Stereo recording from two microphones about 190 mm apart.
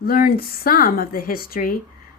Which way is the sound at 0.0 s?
50° left (ahead or behind).